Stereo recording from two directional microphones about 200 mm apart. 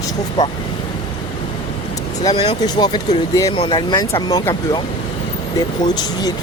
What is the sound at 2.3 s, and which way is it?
Speech, 20° left (ahead or behind).